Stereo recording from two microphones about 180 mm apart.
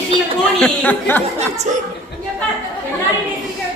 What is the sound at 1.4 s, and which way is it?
Speech, 40° right (ahead or behind).